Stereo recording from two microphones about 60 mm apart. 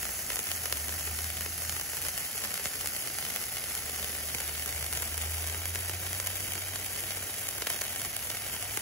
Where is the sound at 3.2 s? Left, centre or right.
Centre.